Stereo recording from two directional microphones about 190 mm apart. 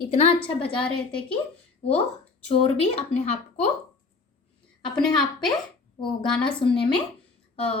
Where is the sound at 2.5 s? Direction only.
30° left (ahead or behind).